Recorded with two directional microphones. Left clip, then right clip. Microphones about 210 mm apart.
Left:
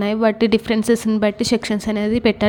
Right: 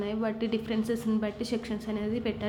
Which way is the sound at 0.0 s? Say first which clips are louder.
Left 14 dB; 50° left (ahead or behind).